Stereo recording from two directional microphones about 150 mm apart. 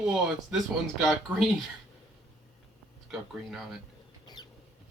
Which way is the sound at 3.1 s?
Centre (ahead or behind).